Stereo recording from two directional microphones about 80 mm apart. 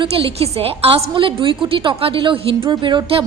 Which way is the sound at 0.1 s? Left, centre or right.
Right.